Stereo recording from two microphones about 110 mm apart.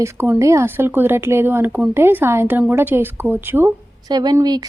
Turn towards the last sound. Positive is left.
turn(degrees=-40)  # may be behind; listen again after turning